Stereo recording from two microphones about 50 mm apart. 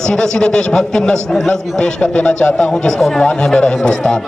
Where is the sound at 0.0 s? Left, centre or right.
Centre.